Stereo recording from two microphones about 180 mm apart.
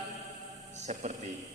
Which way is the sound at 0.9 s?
40° right (ahead or behind).